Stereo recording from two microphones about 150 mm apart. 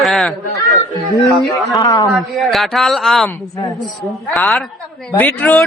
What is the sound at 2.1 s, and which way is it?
A man's voice, centre (ahead or behind).